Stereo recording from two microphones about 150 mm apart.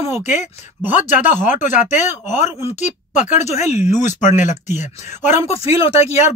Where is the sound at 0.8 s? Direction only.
10° right (ahead or behind).